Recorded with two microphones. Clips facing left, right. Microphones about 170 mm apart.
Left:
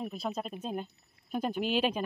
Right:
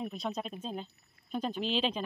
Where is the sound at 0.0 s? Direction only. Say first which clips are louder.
Left 1 dB; 5° left (ahead or behind).